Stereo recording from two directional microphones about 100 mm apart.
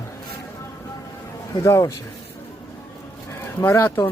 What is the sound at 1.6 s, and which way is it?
Speech, 30° left (ahead or behind).